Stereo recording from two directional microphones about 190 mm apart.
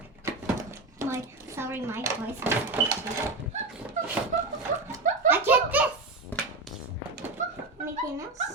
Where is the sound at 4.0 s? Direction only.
40° right (ahead or behind).